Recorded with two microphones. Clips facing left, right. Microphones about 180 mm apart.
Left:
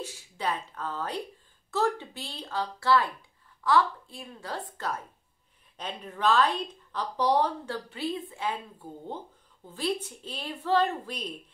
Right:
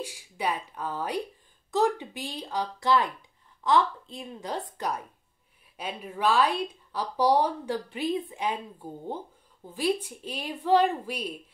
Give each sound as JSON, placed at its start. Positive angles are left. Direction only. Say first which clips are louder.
{"t": 0.0, "sound": "a woman's voice", "louder": "right 2 dB", "side_deg": -10}